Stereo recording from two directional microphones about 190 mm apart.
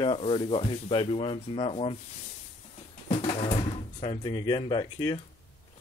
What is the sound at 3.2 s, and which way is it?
Speech, 30° left (ahead or behind).